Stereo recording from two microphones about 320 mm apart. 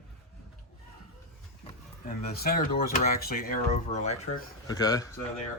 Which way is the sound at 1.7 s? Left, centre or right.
Left.